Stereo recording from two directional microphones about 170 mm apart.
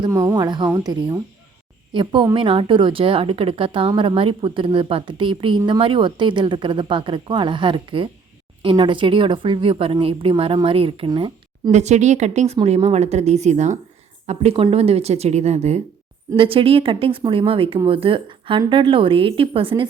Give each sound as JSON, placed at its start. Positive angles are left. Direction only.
{"t": 0.0, "sound": "a woman's voice", "side_deg": -25}
{"t": 11.7, "sound": "a woman's voice", "side_deg": -40}